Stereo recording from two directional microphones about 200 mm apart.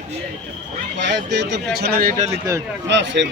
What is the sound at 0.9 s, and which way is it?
Speech, 60° right (ahead or behind).